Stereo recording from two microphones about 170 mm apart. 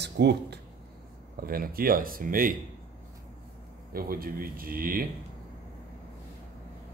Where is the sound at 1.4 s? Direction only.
60° right (ahead or behind).